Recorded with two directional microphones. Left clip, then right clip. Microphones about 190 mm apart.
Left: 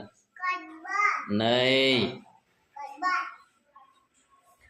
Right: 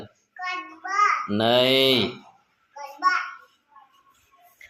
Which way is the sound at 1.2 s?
25° right (ahead or behind).